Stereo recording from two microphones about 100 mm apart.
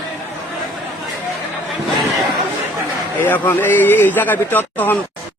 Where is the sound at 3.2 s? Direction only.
20° left (ahead or behind).